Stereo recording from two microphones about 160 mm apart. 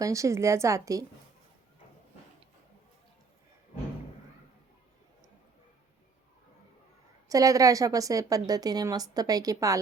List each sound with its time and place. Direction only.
0.0 s a woman's voice: 20° right (ahead or behind)
7.3 s a woman's voice: 20° right (ahead or behind)